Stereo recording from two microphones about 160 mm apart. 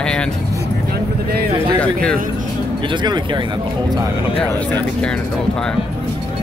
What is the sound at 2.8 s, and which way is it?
Speech, 30° right (ahead or behind).